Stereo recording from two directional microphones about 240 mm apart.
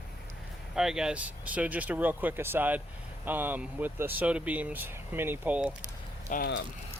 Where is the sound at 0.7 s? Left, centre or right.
Centre.